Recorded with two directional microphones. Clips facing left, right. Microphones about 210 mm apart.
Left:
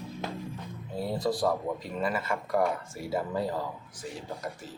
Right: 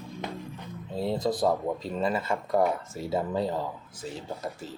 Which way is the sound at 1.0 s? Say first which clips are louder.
Right 2 dB; 20° right (ahead or behind).